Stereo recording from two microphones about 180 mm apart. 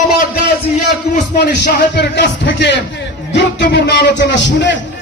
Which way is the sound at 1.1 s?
65° left (ahead or behind).